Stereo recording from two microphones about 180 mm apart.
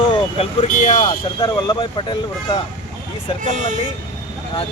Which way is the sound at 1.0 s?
20° left (ahead or behind).